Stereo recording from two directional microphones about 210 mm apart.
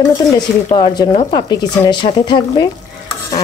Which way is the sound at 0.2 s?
15° left (ahead or behind).